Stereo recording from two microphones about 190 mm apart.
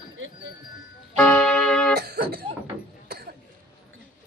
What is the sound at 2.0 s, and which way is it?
Throat clearing, 55° right (ahead or behind).